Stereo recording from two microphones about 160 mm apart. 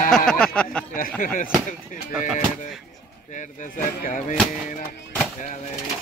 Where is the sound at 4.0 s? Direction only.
55° left (ahead or behind).